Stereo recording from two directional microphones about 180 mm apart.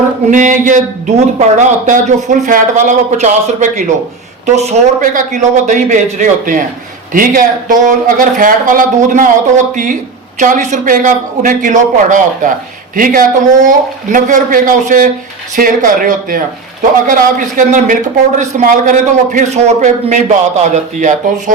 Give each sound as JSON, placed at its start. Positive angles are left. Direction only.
{"t": 0.3, "sound": "a man's voice", "side_deg": -45}